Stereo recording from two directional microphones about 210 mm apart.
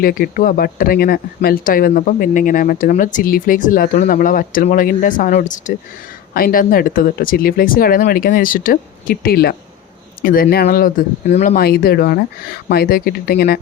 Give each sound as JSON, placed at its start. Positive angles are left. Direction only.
{"t": 0.0, "sound": "speech", "side_deg": 45}